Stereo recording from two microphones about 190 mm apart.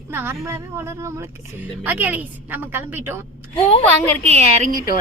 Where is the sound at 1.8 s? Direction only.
10° right (ahead or behind).